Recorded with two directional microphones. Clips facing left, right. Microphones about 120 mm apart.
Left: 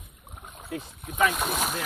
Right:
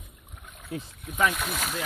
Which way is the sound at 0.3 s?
30° left (ahead or behind).